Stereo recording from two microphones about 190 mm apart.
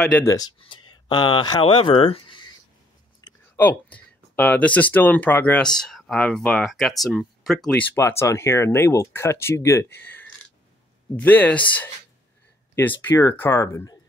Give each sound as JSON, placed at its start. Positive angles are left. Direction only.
{"t": 0.2, "sound": "speech", "side_deg": 15}
{"t": 3.2, "sound": "a sound", "side_deg": 20}
{"t": 3.5, "sound": "speech", "side_deg": 10}
{"t": 7.9, "sound": "speech", "side_deg": 15}